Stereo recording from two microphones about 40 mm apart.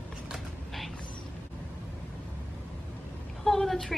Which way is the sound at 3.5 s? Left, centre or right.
Centre.